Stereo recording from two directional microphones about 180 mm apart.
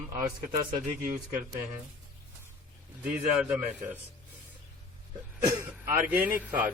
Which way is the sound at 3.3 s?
5° right (ahead or behind).